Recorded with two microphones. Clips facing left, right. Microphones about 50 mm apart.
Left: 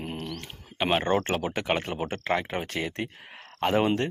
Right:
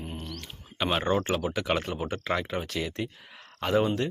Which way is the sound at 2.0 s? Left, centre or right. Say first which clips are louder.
Left 1 dB; left.